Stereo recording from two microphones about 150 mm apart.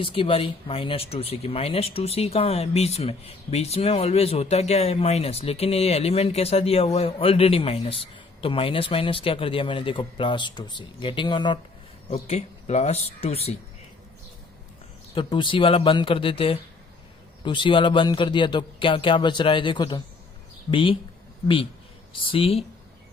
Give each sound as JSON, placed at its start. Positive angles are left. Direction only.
{"t": 0.0, "sound": "speech", "side_deg": 35}
{"t": 12.1, "sound": "speech", "side_deg": 45}
{"t": 15.1, "sound": "speech", "side_deg": 35}